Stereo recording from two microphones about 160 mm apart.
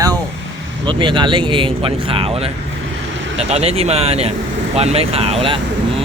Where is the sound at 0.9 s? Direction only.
30° right (ahead or behind).